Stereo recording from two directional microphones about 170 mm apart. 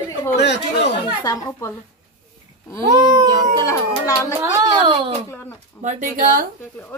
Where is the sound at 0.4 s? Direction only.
80° left.